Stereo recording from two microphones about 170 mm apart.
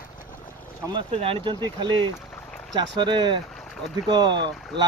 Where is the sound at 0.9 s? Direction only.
30° right (ahead or behind).